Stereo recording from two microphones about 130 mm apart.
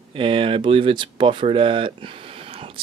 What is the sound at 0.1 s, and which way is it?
Speech, 40° right (ahead or behind).